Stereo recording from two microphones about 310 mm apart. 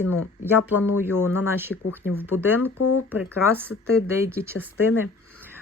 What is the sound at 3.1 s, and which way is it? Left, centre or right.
Speech, centre.